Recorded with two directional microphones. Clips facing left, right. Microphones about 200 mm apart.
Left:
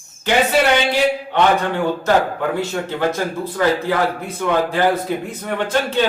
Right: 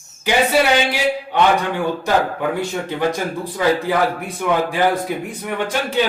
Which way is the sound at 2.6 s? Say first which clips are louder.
Even; 15° right (ahead or behind).